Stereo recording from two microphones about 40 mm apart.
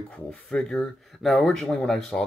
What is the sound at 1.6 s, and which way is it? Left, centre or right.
Speech, left.